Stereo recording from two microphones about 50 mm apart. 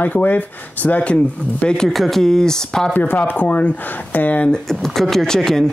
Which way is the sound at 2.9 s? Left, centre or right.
Left.